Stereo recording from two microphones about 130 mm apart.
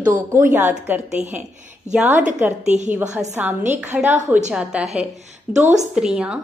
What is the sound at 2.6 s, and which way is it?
Speech, 65° right (ahead or behind).